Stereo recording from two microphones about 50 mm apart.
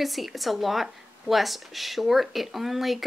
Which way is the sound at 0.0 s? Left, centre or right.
Centre.